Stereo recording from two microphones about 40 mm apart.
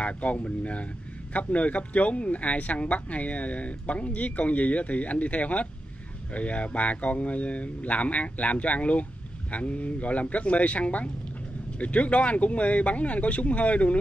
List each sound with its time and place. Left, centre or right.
0.0 s speech: left